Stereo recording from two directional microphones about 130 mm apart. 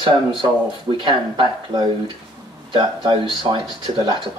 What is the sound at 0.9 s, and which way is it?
Speech, 40° right (ahead or behind).